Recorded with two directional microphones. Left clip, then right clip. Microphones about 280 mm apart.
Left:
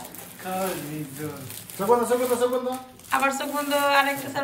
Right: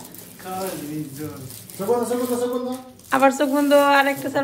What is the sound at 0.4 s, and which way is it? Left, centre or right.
Speech, left.